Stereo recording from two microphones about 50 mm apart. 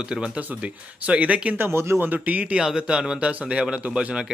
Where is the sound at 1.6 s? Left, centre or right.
Right.